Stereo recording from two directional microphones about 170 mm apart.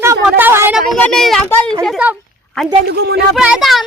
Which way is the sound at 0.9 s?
Centre (ahead or behind).